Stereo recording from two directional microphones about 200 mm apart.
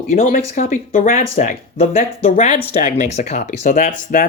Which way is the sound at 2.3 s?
40° left (ahead or behind).